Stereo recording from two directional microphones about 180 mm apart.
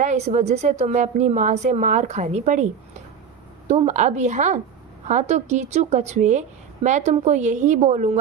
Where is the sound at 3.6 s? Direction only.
40° right (ahead or behind).